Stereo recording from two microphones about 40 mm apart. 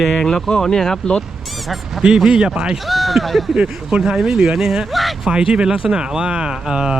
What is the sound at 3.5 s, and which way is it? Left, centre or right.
Speech, centre.